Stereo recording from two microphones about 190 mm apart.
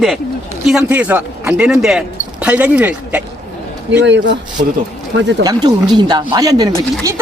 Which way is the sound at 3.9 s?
70° right (ahead or behind).